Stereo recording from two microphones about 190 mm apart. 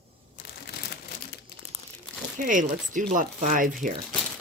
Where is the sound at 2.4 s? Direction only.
45° right (ahead or behind).